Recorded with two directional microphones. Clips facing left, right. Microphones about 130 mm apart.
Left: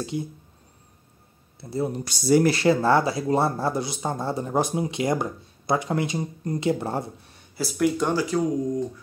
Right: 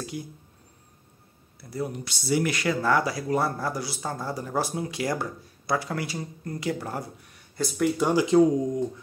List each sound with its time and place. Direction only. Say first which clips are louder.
0.0 s speech: left 6 dB; 25° left (ahead or behind)
1.6 s speech: left 5 dB; 25° left (ahead or behind)
2.0 s speech: left 7 dB; 40° left (ahead or behind)
7.5 s speech: left 2 dB; 5° left (ahead or behind)
8.1 s speech: right 4 dB; 20° right (ahead or behind)